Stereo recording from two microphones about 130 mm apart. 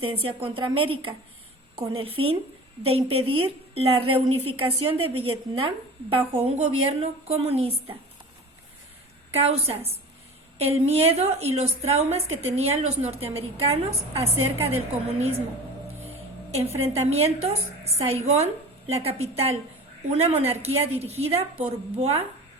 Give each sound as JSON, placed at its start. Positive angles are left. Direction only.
{"t": 0.0, "sound": "a woman's voice", "side_deg": -45}
{"t": 9.3, "sound": "a woman's voice", "side_deg": -50}
{"t": 16.6, "sound": "a woman's voice", "side_deg": -50}